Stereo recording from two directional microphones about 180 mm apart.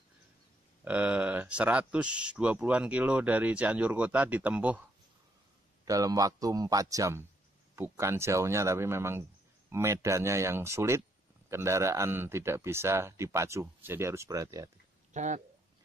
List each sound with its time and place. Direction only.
0.8 s speech: 5° right (ahead or behind)
5.9 s a man's voice: 20° right (ahead or behind)
15.1 s speech: 40° right (ahead or behind)